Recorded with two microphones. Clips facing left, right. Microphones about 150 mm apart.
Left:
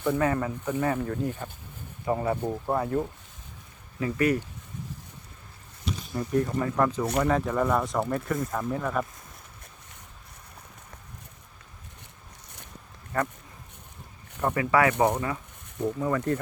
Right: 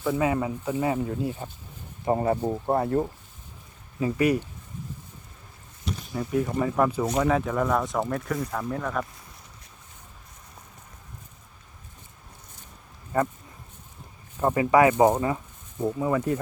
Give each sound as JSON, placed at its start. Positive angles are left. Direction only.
{"t": 0.0, "sound": "speech", "side_deg": -10}
{"t": 2.0, "sound": "speech", "side_deg": -35}
{"t": 4.0, "sound": "speech", "side_deg": -15}
{"t": 6.1, "sound": "speech", "side_deg": -5}
{"t": 13.1, "sound": "speech", "side_deg": -15}
{"t": 14.4, "sound": "speech", "side_deg": -20}